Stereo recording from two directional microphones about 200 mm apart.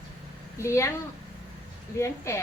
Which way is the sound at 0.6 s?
15° left (ahead or behind).